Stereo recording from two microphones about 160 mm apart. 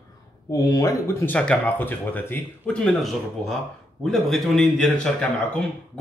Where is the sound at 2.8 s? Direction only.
Centre (ahead or behind).